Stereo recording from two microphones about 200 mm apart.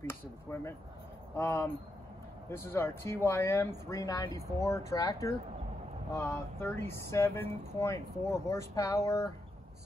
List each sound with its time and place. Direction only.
0.0 s speech: 10° left (ahead or behind)